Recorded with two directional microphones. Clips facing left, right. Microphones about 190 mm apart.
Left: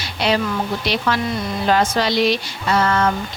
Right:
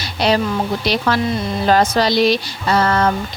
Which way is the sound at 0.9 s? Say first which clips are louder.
Right 3 dB; 40° right (ahead or behind).